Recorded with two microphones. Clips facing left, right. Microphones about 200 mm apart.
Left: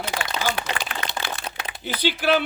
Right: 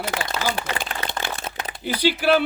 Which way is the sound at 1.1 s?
50° right (ahead or behind).